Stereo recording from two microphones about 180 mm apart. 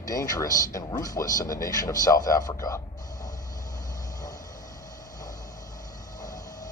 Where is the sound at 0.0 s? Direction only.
20° left (ahead or behind).